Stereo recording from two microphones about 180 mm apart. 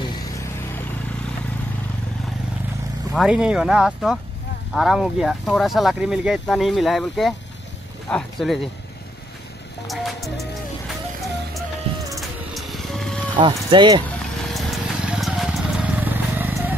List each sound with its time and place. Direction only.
3.2 s speech: 5° right (ahead or behind)
9.8 s music: centre (ahead or behind)
11.9 s a sound: 35° right (ahead or behind)
12.2 s music: centre (ahead or behind)
13.4 s speech: 25° right (ahead or behind)
14.4 s vehicle: centre (ahead or behind)